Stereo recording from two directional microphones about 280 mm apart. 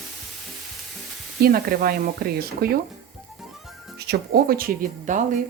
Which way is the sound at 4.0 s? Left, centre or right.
Right.